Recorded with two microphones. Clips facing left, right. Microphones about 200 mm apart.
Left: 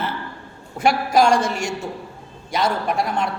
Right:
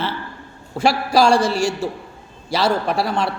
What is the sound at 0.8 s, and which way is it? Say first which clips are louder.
A man's voice: right 1 dB; 30° right (ahead or behind).